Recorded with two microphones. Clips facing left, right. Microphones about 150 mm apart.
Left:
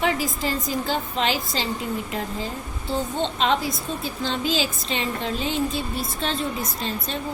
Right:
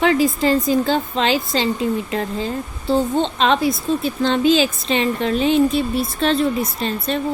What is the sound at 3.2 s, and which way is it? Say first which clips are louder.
A woman's voice: right 5 dB; 75° right (ahead or behind).